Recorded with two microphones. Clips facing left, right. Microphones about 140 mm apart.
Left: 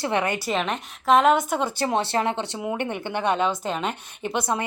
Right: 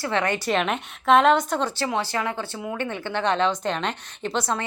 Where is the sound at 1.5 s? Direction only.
10° left (ahead or behind).